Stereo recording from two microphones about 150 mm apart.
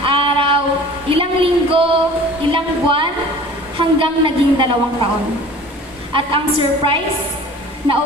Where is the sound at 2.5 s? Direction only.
35° right (ahead or behind).